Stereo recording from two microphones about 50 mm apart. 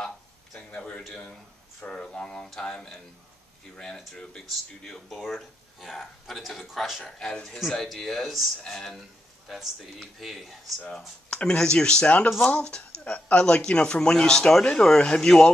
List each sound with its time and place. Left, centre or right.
0.6 s a sound: left
1.9 s speech: centre
4.8 s speech: centre
7.1 s speech: centre
11.2 s speech: centre